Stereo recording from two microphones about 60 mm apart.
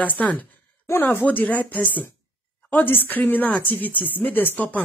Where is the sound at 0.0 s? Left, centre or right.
Left.